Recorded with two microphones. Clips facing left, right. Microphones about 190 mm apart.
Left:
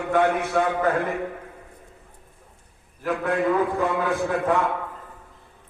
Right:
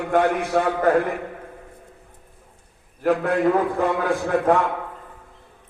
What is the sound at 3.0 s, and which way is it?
Speech, 50° right (ahead or behind).